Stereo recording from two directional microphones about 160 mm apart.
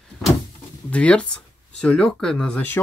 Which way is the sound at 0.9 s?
5° left (ahead or behind).